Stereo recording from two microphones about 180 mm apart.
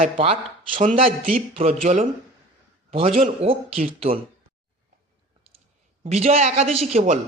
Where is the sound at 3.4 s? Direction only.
30° right (ahead or behind).